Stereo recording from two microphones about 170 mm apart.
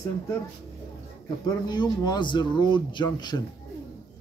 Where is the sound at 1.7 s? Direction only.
25° left (ahead or behind).